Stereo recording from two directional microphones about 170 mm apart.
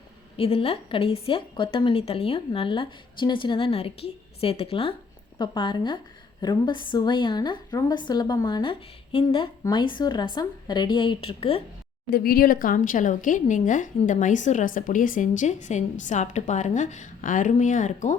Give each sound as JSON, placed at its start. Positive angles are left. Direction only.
{"t": 0.3, "sound": "a woman's voice", "side_deg": 35}
{"t": 12.1, "sound": "speech", "side_deg": 60}